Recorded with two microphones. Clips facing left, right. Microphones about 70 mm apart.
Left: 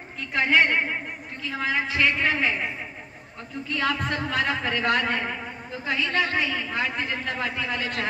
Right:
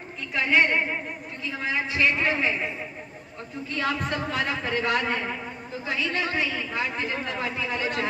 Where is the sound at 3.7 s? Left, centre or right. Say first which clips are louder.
Left 1 dB; left.